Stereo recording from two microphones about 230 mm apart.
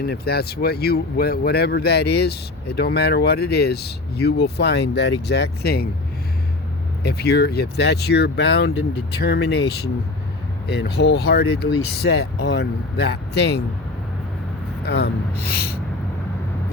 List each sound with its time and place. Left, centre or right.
0.0 s speech: left
7.0 s speech: left
14.8 s speech: left